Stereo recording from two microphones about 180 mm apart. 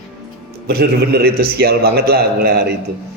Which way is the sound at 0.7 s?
60° right (ahead or behind).